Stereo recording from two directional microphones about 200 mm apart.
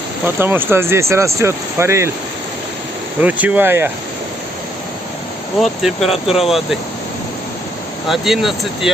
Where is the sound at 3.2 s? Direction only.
5° right (ahead or behind).